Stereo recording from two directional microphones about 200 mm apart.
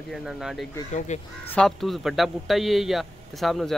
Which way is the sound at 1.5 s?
5° left (ahead or behind).